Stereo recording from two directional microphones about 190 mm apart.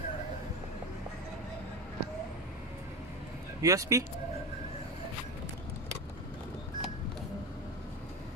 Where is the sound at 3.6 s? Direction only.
15° right (ahead or behind).